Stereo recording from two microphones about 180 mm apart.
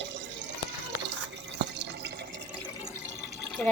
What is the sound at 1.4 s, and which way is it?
Drip, 75° right (ahead or behind).